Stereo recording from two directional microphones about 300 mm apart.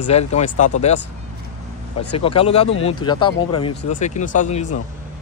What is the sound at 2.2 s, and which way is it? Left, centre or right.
Speech, centre.